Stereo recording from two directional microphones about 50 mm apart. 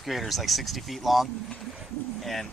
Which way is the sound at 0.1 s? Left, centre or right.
Centre.